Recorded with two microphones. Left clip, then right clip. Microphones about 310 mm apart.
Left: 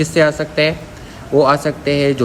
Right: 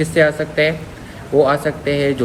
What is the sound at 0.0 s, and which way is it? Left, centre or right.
A man's voice, centre.